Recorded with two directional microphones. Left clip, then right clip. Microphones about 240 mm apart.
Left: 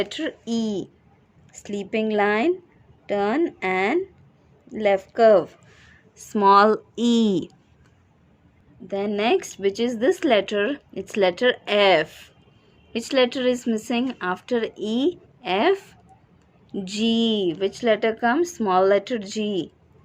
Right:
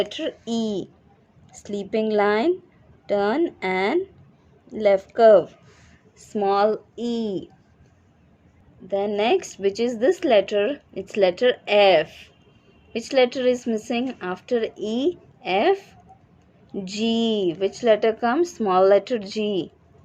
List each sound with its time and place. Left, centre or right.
0.0 s speech: centre
6.1 s speech: left
8.9 s speech: left